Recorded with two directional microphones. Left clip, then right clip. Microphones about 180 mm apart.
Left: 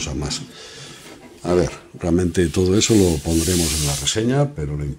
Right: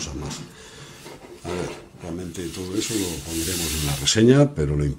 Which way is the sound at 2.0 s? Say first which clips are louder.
Left 14 dB; 30° left (ahead or behind).